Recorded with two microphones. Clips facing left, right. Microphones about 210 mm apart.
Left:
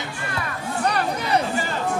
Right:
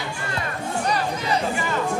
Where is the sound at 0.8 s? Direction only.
60° left (ahead or behind).